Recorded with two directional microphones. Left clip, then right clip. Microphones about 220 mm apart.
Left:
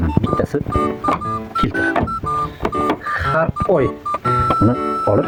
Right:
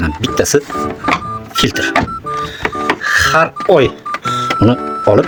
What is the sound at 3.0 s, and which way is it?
Music, 30° right (ahead or behind).